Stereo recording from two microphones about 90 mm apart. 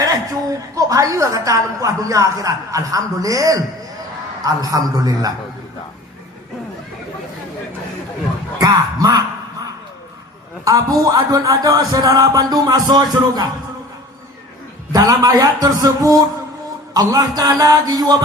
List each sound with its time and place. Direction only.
0.8 s a woman's voice: 40° right (ahead or behind)
8.6 s speech: 45° right (ahead or behind)
10.6 s speech: 40° right (ahead or behind)
14.9 s speech: 40° right (ahead or behind)